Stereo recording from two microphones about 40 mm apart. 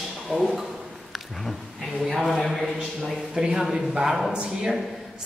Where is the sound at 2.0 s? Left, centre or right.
Centre.